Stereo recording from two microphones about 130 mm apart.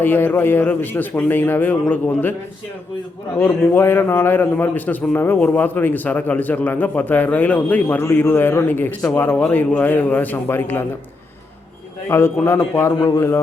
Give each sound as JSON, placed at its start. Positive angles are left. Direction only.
{"t": 0.0, "sound": "a man's voice", "side_deg": 15}
{"t": 3.3, "sound": "a man's voice", "side_deg": 20}
{"t": 12.0, "sound": "a man's voice", "side_deg": 20}